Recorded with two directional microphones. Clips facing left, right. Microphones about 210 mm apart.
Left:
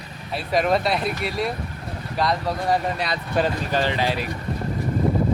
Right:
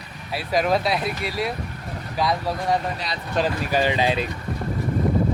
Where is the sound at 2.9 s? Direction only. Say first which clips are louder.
Left 4 dB; 55° left (ahead or behind).